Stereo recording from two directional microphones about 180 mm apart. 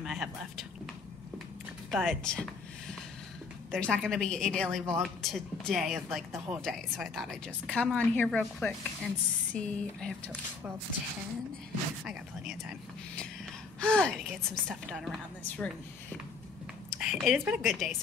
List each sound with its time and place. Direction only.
0.0 s a woman's voice: centre (ahead or behind)
1.9 s a woman's voice: centre (ahead or behind)
3.7 s a woman's voice: 5° left (ahead or behind)
12.1 s a woman's voice: centre (ahead or behind)
16.9 s speech: 5° right (ahead or behind)